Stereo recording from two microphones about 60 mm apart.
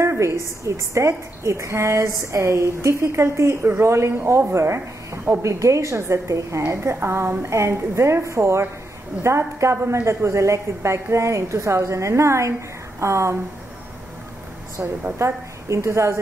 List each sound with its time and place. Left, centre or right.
0.0 s a woman's voice: right
2.0 s a woman's voice: right
5.4 s a woman's voice: right
14.8 s a woman's voice: right
15.1 s a woman's voice: right